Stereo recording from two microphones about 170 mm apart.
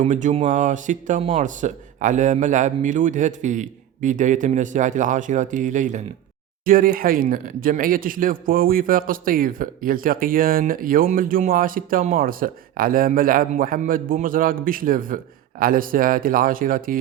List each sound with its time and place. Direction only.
0.0 s a man's voice: 45° right (ahead or behind)
6.7 s speech: 55° right (ahead or behind)